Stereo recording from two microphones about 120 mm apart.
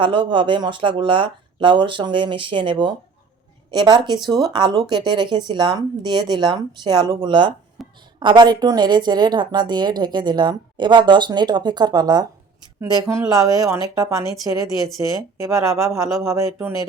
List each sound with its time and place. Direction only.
0.0 s speech: 45° right (ahead or behind)
7.8 s a sound: centre (ahead or behind)
8.2 s a woman's voice: 40° right (ahead or behind); by 16.8 s 20° right (ahead or behind)